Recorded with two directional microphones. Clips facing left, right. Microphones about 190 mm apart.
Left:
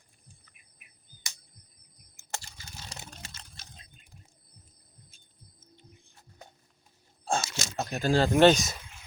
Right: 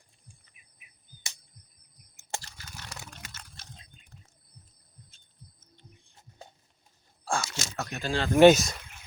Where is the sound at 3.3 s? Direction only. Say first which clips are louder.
Right 2 dB; 10° left (ahead or behind).